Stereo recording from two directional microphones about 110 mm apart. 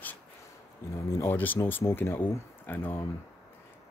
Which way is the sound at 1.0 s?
25° left (ahead or behind).